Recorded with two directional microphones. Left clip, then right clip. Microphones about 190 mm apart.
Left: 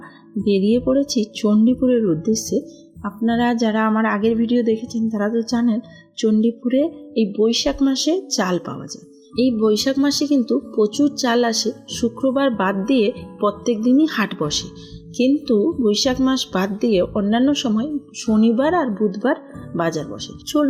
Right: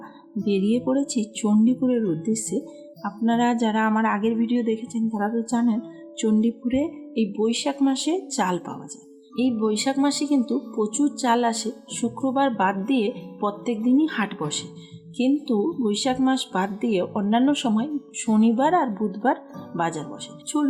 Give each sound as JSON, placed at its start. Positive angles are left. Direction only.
{"t": 0.4, "sound": "a woman's voice", "side_deg": 15}